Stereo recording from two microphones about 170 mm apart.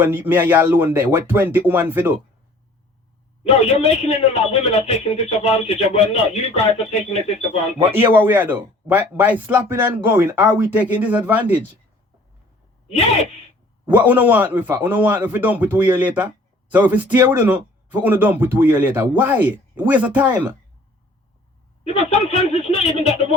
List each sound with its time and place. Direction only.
0.0 s speech: 10° right (ahead or behind)
3.4 s a man's voice: 40° left (ahead or behind)
7.9 s speech: 10° right (ahead or behind)
13.8 s speech: 10° right (ahead or behind)
21.9 s a man's voice: 40° left (ahead or behind)